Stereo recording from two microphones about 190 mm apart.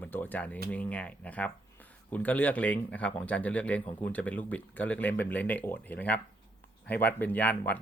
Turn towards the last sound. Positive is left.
turn(degrees=10)  # may be behind; listen again after turning